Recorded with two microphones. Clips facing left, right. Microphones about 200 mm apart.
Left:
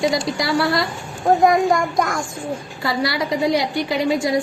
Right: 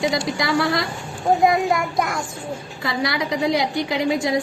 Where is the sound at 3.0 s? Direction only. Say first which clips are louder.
Left 1 dB; 20° right (ahead or behind).